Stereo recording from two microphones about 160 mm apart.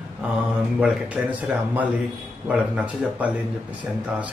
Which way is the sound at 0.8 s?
5° right (ahead or behind).